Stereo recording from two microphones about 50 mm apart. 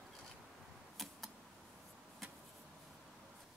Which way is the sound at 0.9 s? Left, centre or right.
Centre.